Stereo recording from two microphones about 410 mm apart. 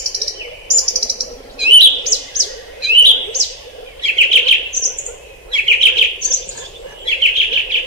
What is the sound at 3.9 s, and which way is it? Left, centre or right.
Chirp, right.